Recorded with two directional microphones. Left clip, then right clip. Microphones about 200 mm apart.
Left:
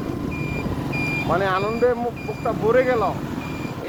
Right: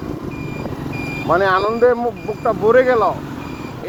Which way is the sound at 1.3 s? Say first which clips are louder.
Right 8 dB; 50° right (ahead or behind).